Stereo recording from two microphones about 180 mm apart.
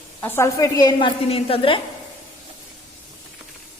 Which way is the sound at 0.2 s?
10° left (ahead or behind).